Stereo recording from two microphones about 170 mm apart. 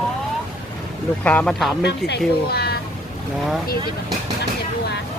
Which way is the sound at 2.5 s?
65° left (ahead or behind).